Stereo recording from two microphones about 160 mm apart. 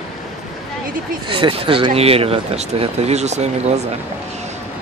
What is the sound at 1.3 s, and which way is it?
Speech, 35° right (ahead or behind).